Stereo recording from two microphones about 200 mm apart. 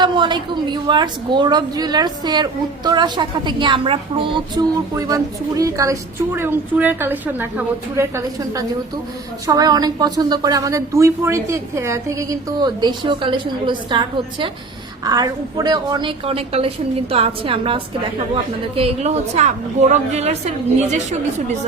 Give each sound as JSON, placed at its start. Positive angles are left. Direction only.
{"t": 0.0, "sound": "a woman's voice", "side_deg": -20}